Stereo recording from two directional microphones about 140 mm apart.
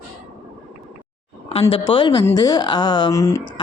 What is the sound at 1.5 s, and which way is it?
Speech, 45° left (ahead or behind).